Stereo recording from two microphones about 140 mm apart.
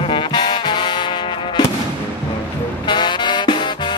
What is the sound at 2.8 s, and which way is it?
Music, 35° left (ahead or behind).